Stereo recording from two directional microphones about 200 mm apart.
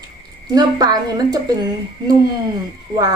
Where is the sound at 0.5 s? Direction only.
20° right (ahead or behind).